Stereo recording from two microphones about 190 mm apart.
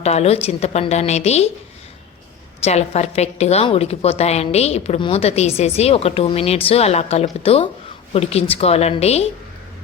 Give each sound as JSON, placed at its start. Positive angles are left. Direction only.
{"t": 0.0, "sound": "a woman's voice", "side_deg": 35}
{"t": 2.6, "sound": "a woman's voice", "side_deg": 35}